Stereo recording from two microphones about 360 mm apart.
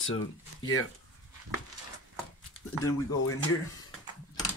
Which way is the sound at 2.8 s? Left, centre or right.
Left.